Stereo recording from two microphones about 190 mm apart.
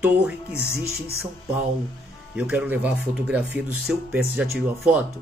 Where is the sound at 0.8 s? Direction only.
55° right (ahead or behind).